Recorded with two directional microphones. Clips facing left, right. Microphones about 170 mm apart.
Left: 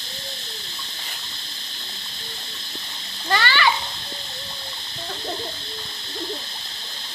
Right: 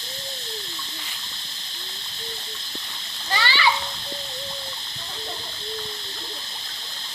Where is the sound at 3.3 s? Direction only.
55° left (ahead or behind).